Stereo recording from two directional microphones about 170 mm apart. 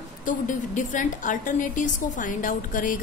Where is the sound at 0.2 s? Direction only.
50° left (ahead or behind).